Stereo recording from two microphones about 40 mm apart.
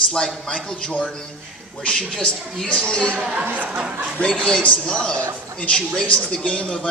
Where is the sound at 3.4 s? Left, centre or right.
Right.